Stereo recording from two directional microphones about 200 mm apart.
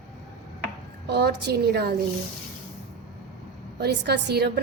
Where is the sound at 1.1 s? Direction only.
55° right (ahead or behind).